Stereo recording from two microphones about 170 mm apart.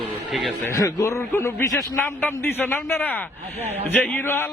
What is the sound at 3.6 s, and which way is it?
Speech, 40° right (ahead or behind).